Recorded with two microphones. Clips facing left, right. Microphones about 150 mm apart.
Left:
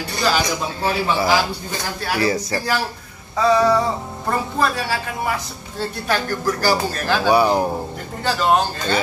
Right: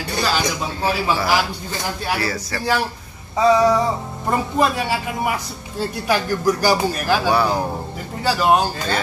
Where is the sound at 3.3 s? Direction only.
15° right (ahead or behind).